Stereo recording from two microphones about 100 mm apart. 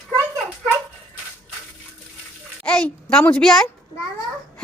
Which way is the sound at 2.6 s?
10° left (ahead or behind).